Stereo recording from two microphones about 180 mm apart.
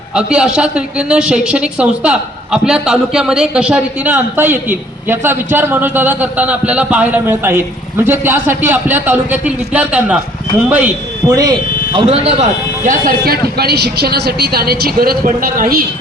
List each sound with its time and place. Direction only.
0.1 s a woman's voice: 5° right (ahead or behind)
11.9 s speech: 35° right (ahead or behind)
12.8 s speech: 50° right (ahead or behind)